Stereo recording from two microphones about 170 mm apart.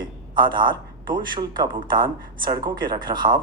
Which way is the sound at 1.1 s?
25° right (ahead or behind).